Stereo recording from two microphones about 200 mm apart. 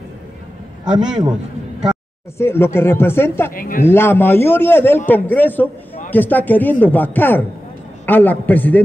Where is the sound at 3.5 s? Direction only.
45° left (ahead or behind).